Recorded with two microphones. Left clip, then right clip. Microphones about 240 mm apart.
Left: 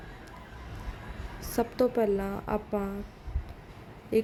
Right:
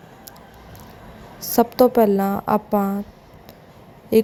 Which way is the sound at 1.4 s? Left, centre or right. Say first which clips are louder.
Right 12 dB; centre.